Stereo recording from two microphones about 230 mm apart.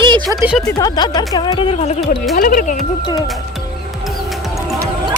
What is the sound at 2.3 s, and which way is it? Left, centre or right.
Speech, left.